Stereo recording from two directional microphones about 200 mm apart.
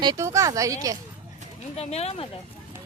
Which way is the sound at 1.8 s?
30° left (ahead or behind).